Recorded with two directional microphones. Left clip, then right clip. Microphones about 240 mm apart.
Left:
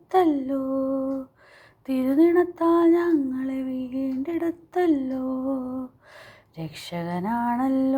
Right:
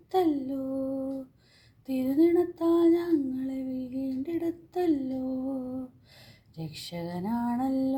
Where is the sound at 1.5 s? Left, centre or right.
Centre.